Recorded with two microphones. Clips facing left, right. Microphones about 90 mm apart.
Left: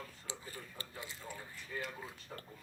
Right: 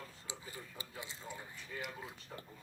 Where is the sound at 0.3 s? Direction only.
15° right (ahead or behind).